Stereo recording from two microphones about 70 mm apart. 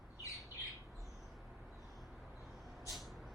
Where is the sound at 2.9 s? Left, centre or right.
Centre.